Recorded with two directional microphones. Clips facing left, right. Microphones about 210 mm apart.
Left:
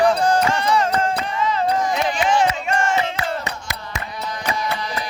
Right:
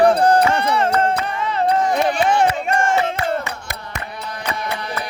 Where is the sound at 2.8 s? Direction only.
50° right (ahead or behind).